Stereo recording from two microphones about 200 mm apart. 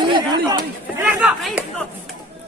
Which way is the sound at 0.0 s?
20° right (ahead or behind).